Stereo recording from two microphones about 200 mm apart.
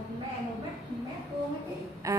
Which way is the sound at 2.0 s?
15° right (ahead or behind).